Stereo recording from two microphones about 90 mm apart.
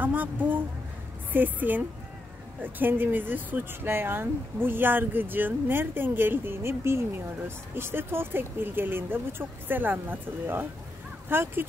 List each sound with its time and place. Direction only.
0.0 s speech: 20° right (ahead or behind)